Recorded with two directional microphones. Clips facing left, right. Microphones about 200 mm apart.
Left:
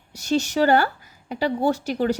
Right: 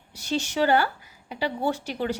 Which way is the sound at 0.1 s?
40° left (ahead or behind).